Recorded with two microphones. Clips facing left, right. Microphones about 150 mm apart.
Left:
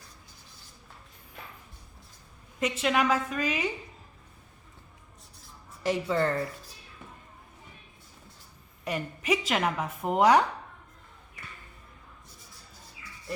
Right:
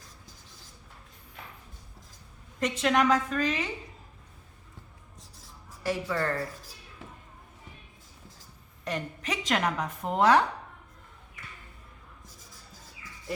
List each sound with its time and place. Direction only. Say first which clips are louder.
2.6 s a woman's voice: right 1 dB; 5° left (ahead or behind)
5.8 s speech: left 3 dB; 20° left (ahead or behind)
8.8 s a woman's voice: left 1 dB; 10° left (ahead or behind)